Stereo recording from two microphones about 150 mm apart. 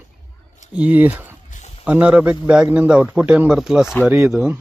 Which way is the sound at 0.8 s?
10° right (ahead or behind).